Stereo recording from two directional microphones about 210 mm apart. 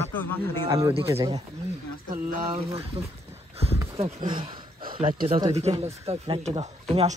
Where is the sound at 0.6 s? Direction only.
15° right (ahead or behind).